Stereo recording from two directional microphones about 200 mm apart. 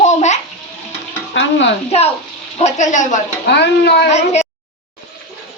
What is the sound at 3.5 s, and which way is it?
Speech, 55° left (ahead or behind).